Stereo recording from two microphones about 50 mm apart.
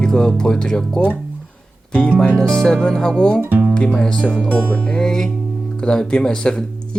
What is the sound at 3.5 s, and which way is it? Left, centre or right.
Music, right.